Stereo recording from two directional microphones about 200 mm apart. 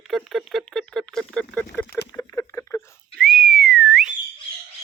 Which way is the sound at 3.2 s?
Centre (ahead or behind).